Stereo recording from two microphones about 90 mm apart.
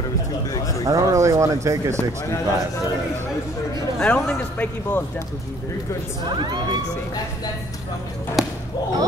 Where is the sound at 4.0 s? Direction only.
15° left (ahead or behind).